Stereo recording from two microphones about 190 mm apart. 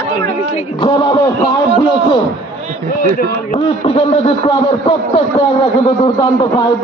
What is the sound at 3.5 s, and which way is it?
A man's voice, 35° left (ahead or behind).